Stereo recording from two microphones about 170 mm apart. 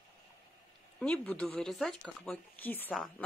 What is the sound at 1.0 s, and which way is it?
Speech, 5° left (ahead or behind).